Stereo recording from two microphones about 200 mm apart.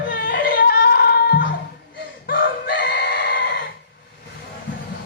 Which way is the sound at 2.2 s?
50° left (ahead or behind).